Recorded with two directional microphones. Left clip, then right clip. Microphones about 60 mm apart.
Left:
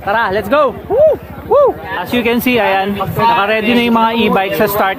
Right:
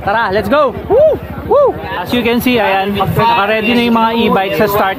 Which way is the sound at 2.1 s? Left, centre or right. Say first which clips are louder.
Right 1 dB; centre.